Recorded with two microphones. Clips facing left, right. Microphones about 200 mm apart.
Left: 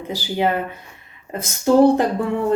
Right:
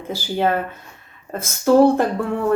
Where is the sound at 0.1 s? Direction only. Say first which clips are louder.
Right 1 dB; 15° left (ahead or behind).